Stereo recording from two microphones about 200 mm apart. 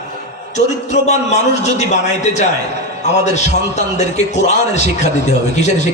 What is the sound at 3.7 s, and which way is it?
A man's voice, 35° left (ahead or behind).